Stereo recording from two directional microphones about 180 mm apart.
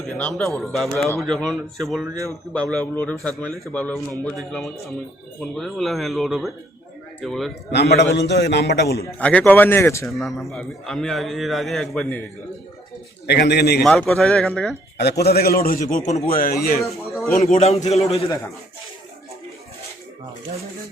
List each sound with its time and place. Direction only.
0.0 s a man's voice: 5° left (ahead or behind)
2.1 s speech: 15° right (ahead or behind)
2.5 s a man's voice: 5° left (ahead or behind)
7.7 s a man's voice: 70° left (ahead or behind)
9.0 s a man's voice: 10° left (ahead or behind)
10.2 s a man's voice: centre (ahead or behind)
13.2 s a man's voice: 65° left (ahead or behind)
13.8 s a man's voice: centre (ahead or behind)
14.9 s a man's voice: 65° left (ahead or behind)
17.4 s a man's voice: 35° left (ahead or behind)